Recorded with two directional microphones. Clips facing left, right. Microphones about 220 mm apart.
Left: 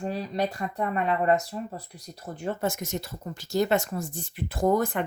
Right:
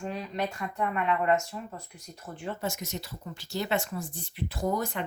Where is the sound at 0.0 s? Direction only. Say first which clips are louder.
Left 4 dB; 35° left (ahead or behind).